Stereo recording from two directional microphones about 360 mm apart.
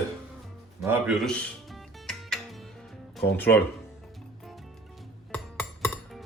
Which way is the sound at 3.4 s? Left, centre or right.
Centre.